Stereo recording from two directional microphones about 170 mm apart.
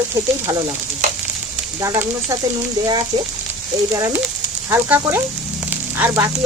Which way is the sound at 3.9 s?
20° right (ahead or behind).